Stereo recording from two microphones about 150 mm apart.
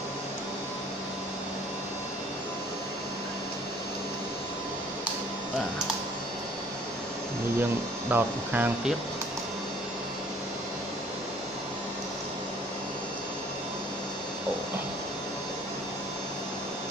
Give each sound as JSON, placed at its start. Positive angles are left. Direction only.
{"t": 8.1, "sound": "speech", "side_deg": -10}